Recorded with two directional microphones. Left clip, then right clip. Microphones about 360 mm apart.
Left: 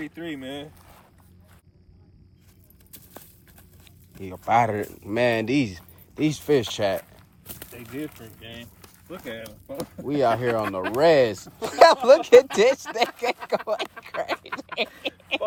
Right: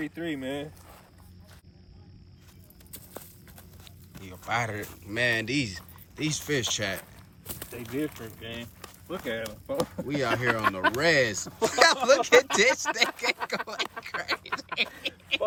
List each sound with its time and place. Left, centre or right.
0.0 s speech: centre
4.2 s speech: centre
7.0 s speech: centre
9.4 s speech: centre
9.8 s speech: centre
10.4 s speech: centre
11.0 s speech: centre
14.2 s a sound: centre